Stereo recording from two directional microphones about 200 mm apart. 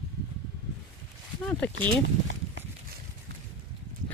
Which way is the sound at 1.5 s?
10° left (ahead or behind).